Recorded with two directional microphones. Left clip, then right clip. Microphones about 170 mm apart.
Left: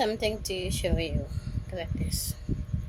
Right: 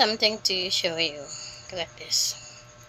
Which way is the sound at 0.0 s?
20° left (ahead or behind).